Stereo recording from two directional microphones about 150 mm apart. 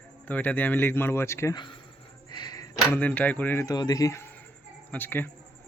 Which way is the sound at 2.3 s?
30° left (ahead or behind).